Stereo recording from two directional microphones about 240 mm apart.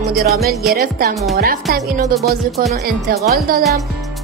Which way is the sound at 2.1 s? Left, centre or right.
Centre.